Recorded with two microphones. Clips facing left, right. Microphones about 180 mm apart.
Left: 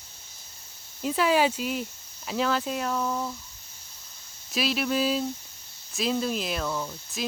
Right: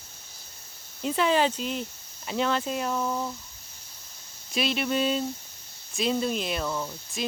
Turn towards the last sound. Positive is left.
turn(degrees=-5)  # may be behind; listen again after turning